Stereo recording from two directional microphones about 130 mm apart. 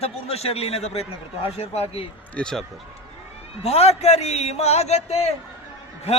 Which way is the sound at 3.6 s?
50° left (ahead or behind).